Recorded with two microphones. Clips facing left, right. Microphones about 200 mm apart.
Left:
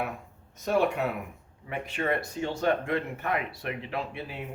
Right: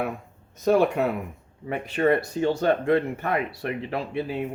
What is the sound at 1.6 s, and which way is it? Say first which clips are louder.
Speech: right 8 dB; 40° right (ahead or behind).